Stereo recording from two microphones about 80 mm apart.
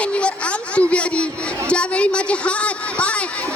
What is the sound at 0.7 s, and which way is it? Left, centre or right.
A woman's voice, centre.